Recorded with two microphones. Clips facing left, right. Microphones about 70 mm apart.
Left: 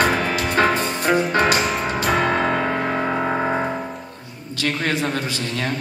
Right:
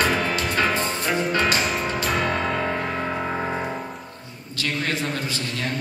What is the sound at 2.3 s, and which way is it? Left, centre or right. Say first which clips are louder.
Music: left 4 dB; left.